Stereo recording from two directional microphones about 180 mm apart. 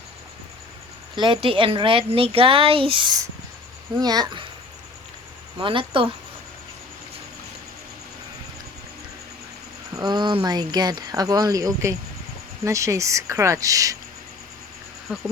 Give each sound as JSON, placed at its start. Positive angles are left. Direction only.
{"t": 1.1, "sound": "speech", "side_deg": -25}
{"t": 5.5, "sound": "speech", "side_deg": -30}
{"t": 9.9, "sound": "speech", "side_deg": -25}
{"t": 15.1, "sound": "insect", "side_deg": -5}